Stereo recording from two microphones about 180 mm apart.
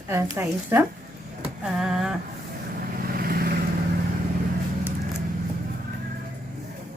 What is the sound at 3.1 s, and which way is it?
Vehicle, 55° right (ahead or behind).